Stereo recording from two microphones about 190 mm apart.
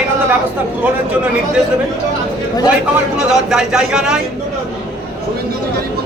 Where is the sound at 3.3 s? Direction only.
5° right (ahead or behind).